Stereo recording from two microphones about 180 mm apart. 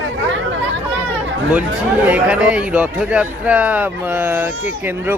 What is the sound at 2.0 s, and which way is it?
Speech, 5° right (ahead or behind).